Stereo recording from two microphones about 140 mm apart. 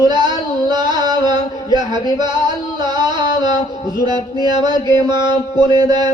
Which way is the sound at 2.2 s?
30° right (ahead or behind).